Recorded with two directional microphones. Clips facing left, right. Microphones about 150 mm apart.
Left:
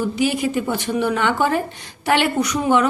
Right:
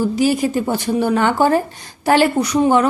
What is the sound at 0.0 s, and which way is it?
A woman's voice, 40° right (ahead or behind).